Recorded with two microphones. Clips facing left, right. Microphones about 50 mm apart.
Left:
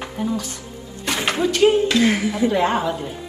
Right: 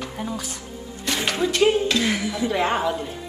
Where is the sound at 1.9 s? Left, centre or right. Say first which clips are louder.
Left 5 dB; left.